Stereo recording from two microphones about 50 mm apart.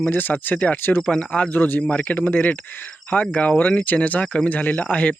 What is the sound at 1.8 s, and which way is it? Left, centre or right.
A man's voice, left.